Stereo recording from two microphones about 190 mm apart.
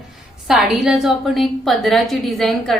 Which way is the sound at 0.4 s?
Centre (ahead or behind).